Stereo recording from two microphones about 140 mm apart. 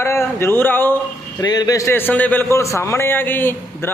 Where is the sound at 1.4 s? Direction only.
25° left (ahead or behind).